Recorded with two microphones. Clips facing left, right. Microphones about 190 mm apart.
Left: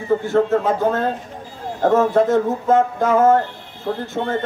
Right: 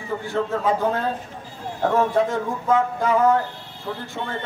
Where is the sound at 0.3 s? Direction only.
50° left (ahead or behind).